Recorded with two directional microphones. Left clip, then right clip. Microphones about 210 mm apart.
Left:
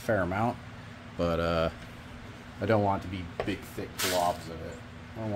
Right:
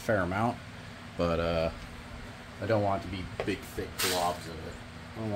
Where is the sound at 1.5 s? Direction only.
25° left (ahead or behind).